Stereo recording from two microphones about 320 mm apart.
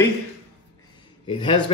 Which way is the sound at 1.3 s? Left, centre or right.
Centre.